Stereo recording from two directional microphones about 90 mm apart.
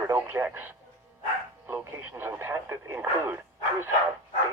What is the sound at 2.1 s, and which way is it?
Speech, 25° right (ahead or behind).